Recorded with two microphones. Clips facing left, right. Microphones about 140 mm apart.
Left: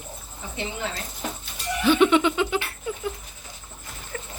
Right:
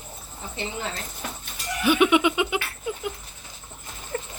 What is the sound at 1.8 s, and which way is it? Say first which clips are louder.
Giggle: left 1 dB; 15° right (ahead or behind).